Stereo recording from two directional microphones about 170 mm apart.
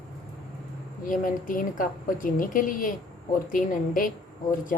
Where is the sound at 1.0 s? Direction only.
50° left (ahead or behind).